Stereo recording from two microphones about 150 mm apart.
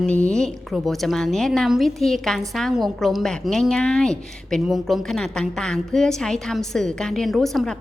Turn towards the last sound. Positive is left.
turn(degrees=0)  # may be behind; listen again after turning